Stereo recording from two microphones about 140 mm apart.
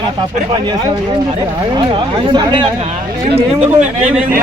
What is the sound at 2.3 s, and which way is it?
Speech, 35° right (ahead or behind).